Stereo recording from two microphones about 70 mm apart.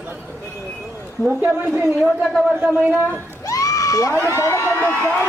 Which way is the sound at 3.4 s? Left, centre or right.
Left.